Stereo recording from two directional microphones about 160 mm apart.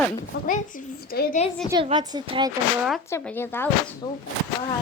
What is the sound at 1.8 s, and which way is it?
Speech, 25° right (ahead or behind).